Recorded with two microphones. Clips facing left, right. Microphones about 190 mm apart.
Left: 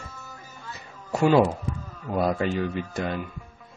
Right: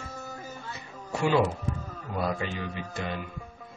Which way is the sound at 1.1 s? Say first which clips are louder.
Left 5 dB; 40° left (ahead or behind).